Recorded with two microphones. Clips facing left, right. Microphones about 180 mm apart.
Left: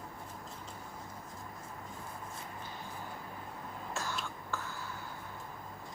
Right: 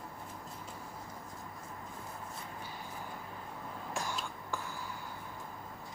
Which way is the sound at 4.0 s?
15° right (ahead or behind).